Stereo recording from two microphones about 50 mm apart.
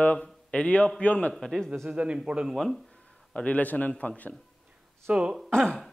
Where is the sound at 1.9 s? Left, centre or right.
Right.